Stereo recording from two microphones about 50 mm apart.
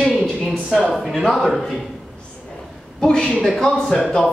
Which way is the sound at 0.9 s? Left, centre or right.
Centre.